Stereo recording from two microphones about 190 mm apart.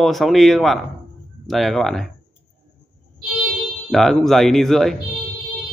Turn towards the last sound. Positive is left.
turn(degrees=0)  # may be behind; listen again after turning